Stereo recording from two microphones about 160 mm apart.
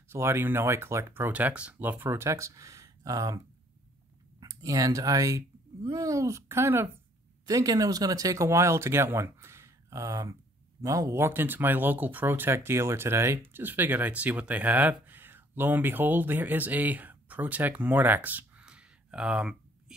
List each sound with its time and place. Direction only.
0.1 s speech: 15° right (ahead or behind)
4.4 s speech: 20° right (ahead or behind); by 19.5 s 5° right (ahead or behind)